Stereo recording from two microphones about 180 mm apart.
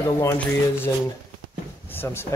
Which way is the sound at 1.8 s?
10° left (ahead or behind).